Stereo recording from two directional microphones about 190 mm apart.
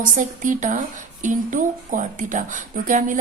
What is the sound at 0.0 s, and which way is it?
Speech, 45° right (ahead or behind).